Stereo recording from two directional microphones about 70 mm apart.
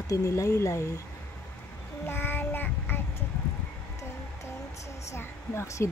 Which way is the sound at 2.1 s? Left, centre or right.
Left.